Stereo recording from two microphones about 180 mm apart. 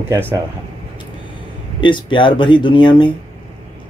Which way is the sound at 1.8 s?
25° left (ahead or behind).